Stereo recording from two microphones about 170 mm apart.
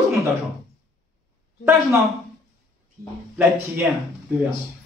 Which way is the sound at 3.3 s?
15° right (ahead or behind).